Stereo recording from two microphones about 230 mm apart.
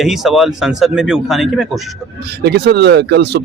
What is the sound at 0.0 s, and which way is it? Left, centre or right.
Speech, centre.